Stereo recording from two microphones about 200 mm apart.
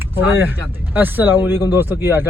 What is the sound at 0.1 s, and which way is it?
Speech, 10° right (ahead or behind).